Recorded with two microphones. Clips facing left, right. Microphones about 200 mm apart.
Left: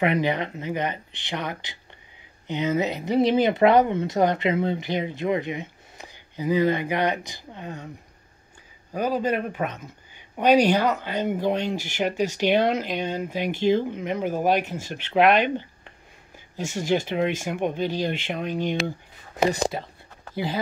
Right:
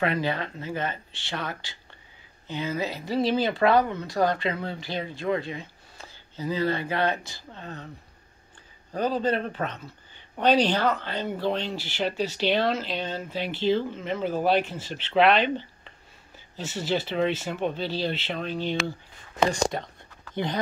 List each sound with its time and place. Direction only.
0.0 s speech: 20° left (ahead or behind)
8.9 s speech: 10° left (ahead or behind)